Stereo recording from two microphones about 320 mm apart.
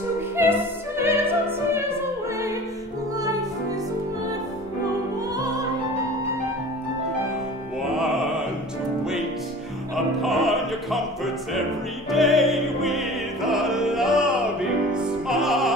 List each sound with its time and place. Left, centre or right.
0.4 s opera: centre
7.9 s opera: centre
10.2 s opera: centre
14.9 s music: centre